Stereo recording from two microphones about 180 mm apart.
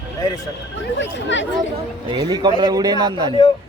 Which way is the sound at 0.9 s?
85° left.